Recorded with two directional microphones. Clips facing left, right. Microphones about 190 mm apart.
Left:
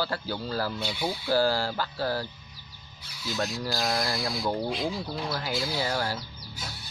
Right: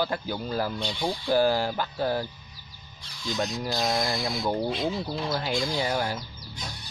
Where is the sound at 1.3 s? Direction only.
20° right (ahead or behind).